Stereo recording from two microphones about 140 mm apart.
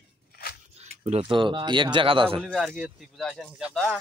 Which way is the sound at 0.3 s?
90° left.